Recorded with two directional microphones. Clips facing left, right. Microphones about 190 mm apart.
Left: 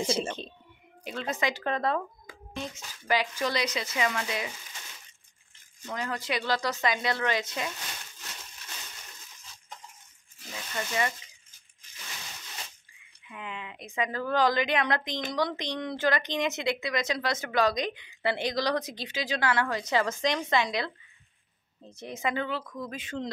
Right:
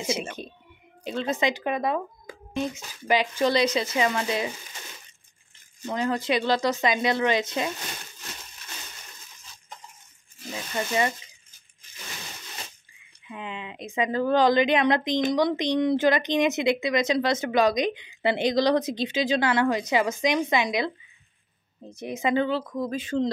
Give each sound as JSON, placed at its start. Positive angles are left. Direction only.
{"t": 1.0, "sound": "a woman's voice", "side_deg": -30}
{"t": 1.5, "sound": "a woman's voice", "side_deg": -15}
{"t": 5.9, "sound": "a woman's voice", "side_deg": -25}
{"t": 10.5, "sound": "a woman's voice", "side_deg": -25}
{"t": 13.3, "sound": "a woman's voice", "side_deg": -25}
{"t": 22.3, "sound": "speech", "side_deg": -30}